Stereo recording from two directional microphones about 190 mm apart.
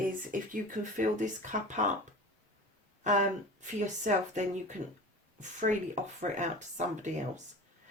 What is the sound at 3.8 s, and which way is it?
Speech, 40° right (ahead or behind).